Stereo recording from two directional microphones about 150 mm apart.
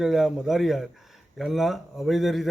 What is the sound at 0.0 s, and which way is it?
Speech, 5° right (ahead or behind).